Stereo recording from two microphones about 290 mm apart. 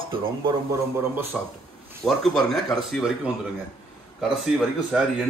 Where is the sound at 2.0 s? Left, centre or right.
Centre.